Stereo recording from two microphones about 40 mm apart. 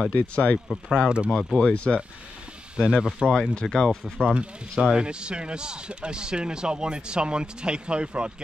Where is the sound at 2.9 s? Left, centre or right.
Centre.